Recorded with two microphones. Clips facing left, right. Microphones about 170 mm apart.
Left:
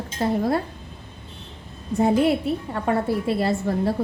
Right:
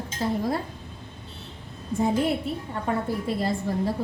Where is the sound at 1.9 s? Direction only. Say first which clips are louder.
Left 5 dB; 70° left (ahead or behind).